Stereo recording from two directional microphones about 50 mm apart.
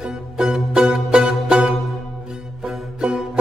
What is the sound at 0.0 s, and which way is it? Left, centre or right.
Music, centre.